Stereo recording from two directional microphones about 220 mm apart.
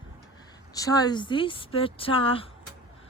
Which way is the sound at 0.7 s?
15° left (ahead or behind).